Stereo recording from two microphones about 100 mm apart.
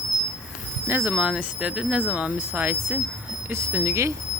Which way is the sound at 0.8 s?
20° right (ahead or behind).